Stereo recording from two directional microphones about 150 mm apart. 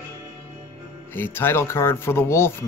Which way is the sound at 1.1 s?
15° left (ahead or behind).